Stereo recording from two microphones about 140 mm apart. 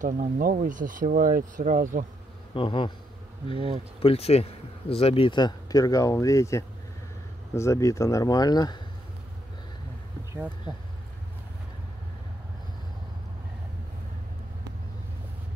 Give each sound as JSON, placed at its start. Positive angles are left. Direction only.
{"t": 0.0, "sound": "speech", "side_deg": -80}
{"t": 2.5, "sound": "speech", "side_deg": 35}
{"t": 3.5, "sound": "speech", "side_deg": -45}
{"t": 4.0, "sound": "speech", "side_deg": 45}